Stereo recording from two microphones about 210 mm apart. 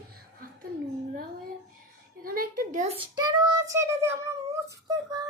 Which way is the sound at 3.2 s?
20° right (ahead or behind).